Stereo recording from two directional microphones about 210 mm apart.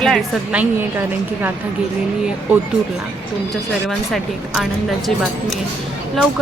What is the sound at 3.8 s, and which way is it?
A woman's voice, centre (ahead or behind).